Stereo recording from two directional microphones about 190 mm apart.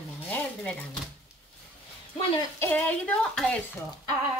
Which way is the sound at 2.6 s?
10° left (ahead or behind).